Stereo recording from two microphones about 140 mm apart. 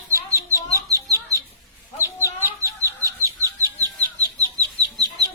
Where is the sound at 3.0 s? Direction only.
25° right (ahead or behind).